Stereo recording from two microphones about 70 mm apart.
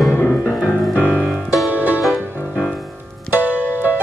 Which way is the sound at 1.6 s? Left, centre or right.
Right.